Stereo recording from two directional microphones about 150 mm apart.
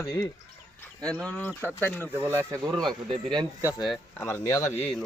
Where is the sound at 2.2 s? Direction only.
15° right (ahead or behind).